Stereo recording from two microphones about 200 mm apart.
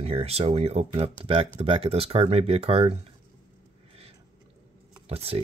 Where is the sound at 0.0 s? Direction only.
30° right (ahead or behind).